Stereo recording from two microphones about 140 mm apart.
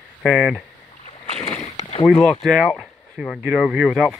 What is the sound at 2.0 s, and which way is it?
Speech, 5° left (ahead or behind).